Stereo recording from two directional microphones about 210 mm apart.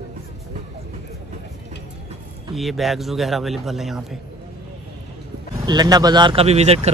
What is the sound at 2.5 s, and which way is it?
A man's voice, centre (ahead or behind).